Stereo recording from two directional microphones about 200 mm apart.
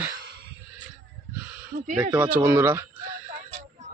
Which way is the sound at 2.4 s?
10° right (ahead or behind).